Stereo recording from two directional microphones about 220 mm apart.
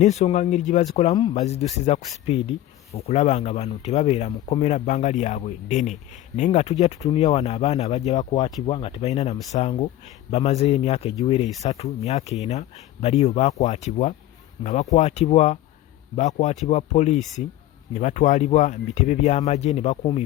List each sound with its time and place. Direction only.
0.0 s speech: 30° left (ahead or behind)
8.2 s speech: 20° left (ahead or behind)